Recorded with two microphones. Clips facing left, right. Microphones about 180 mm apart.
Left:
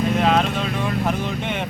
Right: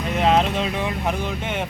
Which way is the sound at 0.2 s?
25° right (ahead or behind).